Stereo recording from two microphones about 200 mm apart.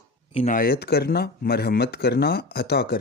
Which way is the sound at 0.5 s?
50° left (ahead or behind).